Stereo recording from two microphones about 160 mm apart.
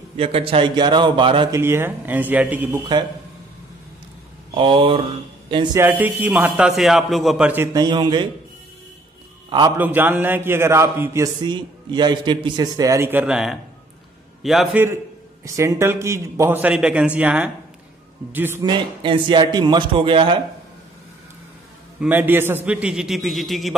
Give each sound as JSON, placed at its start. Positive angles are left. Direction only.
{"t": 0.2, "sound": "speech", "side_deg": -35}
{"t": 1.5, "sound": "a man's voice", "side_deg": -15}
{"t": 4.6, "sound": "a man's voice", "side_deg": -35}
{"t": 5.8, "sound": "a man's voice", "side_deg": -10}
{"t": 9.5, "sound": "a man's voice", "side_deg": -25}
{"t": 9.8, "sound": "a man's voice", "side_deg": -10}
{"t": 11.4, "sound": "a man's voice", "side_deg": -30}
{"t": 15.4, "sound": "a man's voice", "side_deg": -20}
{"t": 18.6, "sound": "speech", "side_deg": -30}
{"t": 22.0, "sound": "a man's voice", "side_deg": -10}